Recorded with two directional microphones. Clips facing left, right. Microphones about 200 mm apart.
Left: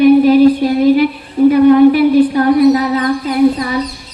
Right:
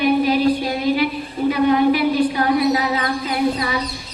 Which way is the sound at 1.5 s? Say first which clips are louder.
Left 8 dB; 50° left (ahead or behind).